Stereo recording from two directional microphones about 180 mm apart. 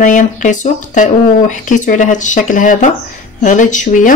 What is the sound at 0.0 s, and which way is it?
Speech, 45° left (ahead or behind).